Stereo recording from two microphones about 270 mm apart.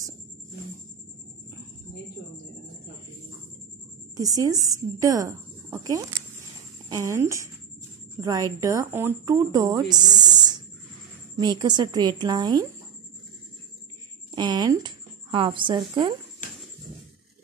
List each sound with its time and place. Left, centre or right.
4.2 s speech: centre
14.3 s speech: centre